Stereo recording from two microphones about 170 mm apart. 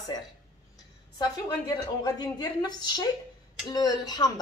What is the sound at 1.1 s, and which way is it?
A woman's voice, 25° left (ahead or behind).